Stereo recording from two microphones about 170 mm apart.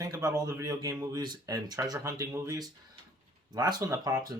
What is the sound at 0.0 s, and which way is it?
Speech, 20° right (ahead or behind).